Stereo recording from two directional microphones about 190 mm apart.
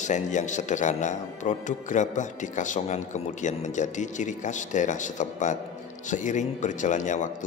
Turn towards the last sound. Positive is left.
turn(degrees=40)  # may be behind; listen again after turning